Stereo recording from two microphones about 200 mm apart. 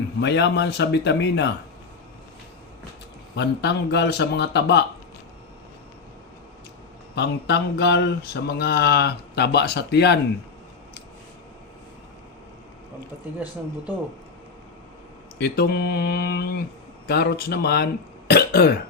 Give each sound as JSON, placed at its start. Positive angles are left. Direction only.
{"t": 0.2, "sound": "mantra", "side_deg": 60}
{"t": 3.3, "sound": "mantra", "side_deg": 60}
{"t": 7.2, "sound": "mantra", "side_deg": 55}
{"t": 15.4, "sound": "speech", "side_deg": 55}